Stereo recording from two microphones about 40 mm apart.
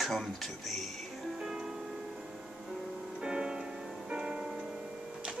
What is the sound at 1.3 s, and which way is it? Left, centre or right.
Music, centre.